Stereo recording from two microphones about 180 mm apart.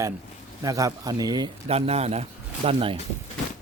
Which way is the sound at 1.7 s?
35° right (ahead or behind).